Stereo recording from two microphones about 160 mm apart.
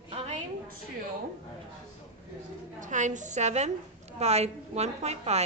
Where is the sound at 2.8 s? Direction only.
50° right (ahead or behind).